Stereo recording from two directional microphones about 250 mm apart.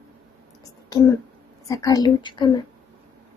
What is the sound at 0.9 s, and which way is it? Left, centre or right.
A child's voice, centre.